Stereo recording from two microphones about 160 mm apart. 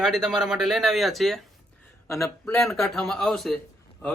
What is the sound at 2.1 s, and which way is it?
Speech, 15° left (ahead or behind).